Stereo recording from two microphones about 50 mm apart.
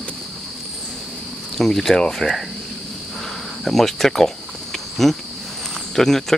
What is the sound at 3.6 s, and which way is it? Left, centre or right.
Speech, centre.